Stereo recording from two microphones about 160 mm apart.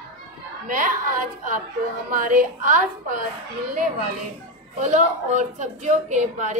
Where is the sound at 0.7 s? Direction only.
55° right (ahead or behind).